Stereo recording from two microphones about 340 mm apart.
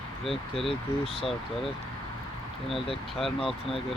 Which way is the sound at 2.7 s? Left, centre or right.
Centre.